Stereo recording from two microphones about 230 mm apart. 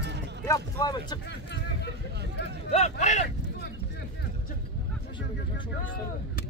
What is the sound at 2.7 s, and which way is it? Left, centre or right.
Speech, left.